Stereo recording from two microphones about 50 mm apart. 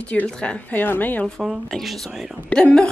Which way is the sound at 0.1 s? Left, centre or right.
Left.